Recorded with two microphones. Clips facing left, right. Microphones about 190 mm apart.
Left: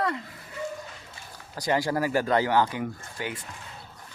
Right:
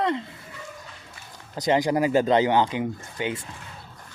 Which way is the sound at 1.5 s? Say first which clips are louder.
Right 4 dB; 20° right (ahead or behind).